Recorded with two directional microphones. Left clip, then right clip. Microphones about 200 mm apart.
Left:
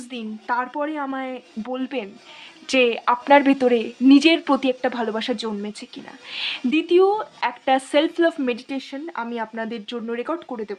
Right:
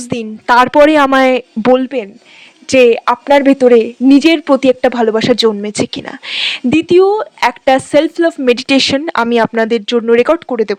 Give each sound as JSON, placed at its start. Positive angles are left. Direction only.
{"t": 0.1, "sound": "speech", "side_deg": -45}
{"t": 1.8, "sound": "speech", "side_deg": -35}
{"t": 8.4, "sound": "speech", "side_deg": -50}